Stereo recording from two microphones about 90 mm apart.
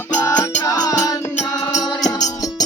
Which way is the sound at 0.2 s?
45° left (ahead or behind).